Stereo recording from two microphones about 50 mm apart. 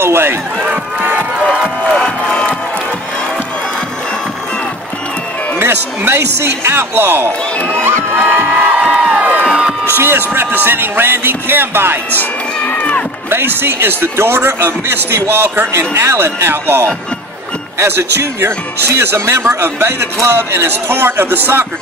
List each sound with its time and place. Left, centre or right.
0.0 s speech: right
2.0 s music: centre
5.6 s speech: right
7.8 s music: right
8.7 s crowd: right
9.8 s speech: right
12.2 s music: left
13.3 s speech: right